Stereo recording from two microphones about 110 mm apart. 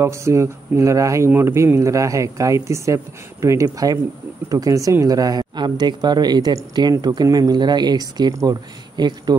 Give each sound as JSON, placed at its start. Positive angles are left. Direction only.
{"t": 0.0, "sound": "speech", "side_deg": -25}